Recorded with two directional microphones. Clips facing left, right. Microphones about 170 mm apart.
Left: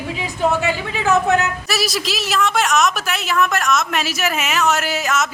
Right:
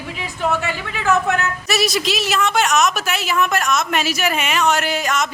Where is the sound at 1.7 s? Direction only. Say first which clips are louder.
Right 2 dB; centre (ahead or behind).